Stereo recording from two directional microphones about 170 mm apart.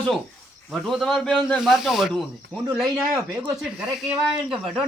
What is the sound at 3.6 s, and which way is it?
Speech, centre (ahead or behind).